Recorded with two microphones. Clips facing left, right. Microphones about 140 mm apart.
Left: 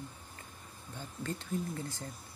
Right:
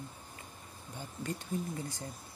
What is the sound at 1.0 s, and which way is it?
Speech, 15° right (ahead or behind).